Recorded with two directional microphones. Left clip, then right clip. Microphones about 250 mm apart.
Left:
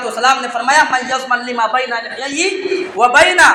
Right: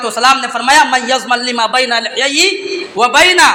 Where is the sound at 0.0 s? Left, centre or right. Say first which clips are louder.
Right 3 dB; right.